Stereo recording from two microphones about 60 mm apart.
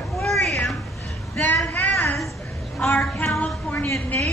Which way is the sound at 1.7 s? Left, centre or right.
Left.